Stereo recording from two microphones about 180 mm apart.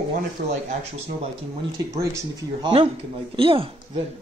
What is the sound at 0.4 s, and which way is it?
Speech, 60° right (ahead or behind).